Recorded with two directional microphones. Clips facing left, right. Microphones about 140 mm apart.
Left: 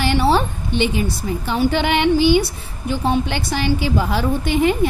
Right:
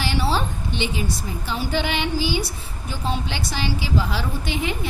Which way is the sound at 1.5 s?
60° left (ahead or behind).